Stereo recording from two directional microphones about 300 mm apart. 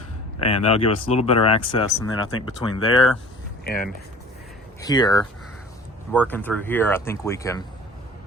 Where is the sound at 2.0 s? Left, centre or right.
Left.